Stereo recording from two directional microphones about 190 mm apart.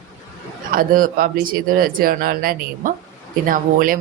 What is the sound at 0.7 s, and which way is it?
Speech, 50° right (ahead or behind).